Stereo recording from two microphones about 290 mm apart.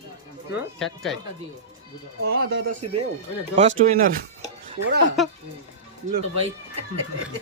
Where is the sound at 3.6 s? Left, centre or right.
Right.